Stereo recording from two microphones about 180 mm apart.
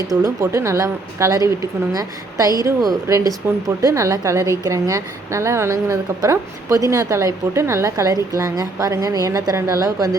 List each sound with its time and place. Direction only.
0.1 s a woman's voice: 20° right (ahead or behind)